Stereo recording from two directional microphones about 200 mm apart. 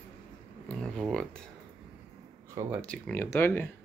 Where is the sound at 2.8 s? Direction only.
5° left (ahead or behind).